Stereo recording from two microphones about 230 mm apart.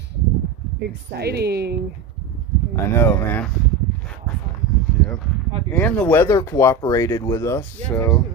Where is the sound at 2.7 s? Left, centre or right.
Centre.